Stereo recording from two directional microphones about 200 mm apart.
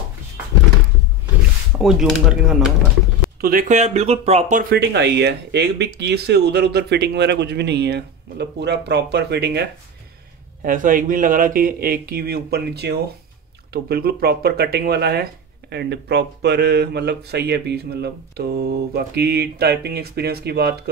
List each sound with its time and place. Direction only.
1.8 s speech: centre (ahead or behind)
3.3 s speech: 45° right (ahead or behind)
4.7 s speech: 55° right (ahead or behind)
10.6 s speech: 40° right (ahead or behind)